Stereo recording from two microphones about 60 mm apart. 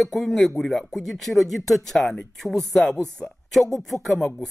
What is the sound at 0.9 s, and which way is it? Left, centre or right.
Speech, centre.